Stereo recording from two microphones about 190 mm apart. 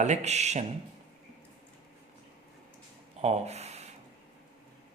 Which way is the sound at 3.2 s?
35° right (ahead or behind).